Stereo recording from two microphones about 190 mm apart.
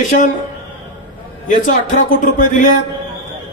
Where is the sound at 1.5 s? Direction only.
45° left (ahead or behind).